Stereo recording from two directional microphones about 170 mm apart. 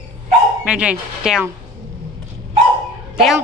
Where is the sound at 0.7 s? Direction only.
5° right (ahead or behind).